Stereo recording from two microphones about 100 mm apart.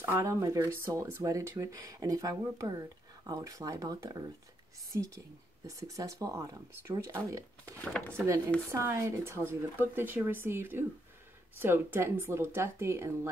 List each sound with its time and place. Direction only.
0.0 s speech: 25° right (ahead or behind)
8.7 s speech: 30° right (ahead or behind)